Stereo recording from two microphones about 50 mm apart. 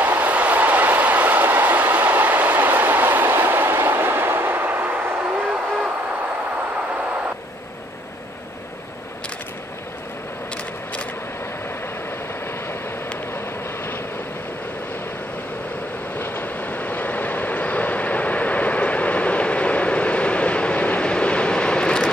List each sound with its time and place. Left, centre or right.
0.0 s train: right
16.2 s train: left; by 22.1 s centre